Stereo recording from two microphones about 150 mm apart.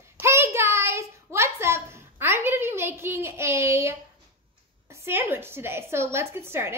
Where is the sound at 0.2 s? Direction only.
15° right (ahead or behind).